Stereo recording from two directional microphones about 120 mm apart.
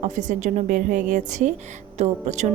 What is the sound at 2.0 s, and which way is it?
Speech, 75° right (ahead or behind).